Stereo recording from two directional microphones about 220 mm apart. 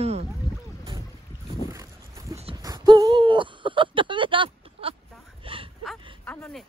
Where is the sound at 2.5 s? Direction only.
20° right (ahead or behind).